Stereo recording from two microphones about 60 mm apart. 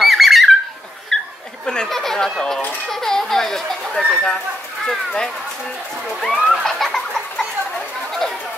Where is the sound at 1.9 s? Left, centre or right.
Centre.